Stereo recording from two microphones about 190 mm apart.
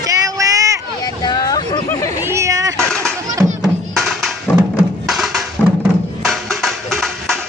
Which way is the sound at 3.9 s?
Centre (ahead or behind).